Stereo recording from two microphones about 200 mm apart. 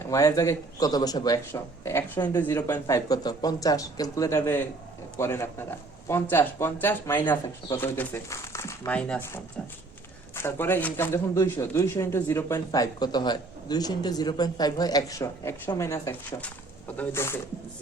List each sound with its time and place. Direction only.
0.1 s speech: 15° left (ahead or behind)